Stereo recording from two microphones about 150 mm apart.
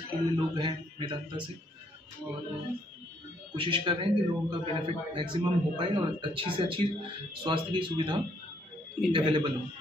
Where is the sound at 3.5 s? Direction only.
35° right (ahead or behind).